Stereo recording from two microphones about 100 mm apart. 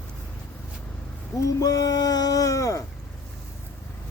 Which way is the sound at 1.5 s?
35° left (ahead or behind).